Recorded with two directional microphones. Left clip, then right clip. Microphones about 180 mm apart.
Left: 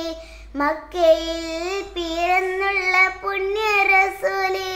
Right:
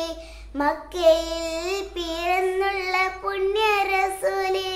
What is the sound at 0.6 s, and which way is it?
Child singing, 10° left (ahead or behind).